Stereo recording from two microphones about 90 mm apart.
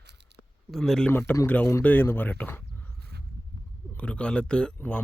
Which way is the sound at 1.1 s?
25° left (ahead or behind).